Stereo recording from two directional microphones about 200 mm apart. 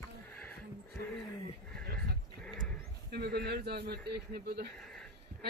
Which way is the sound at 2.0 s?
Centre (ahead or behind).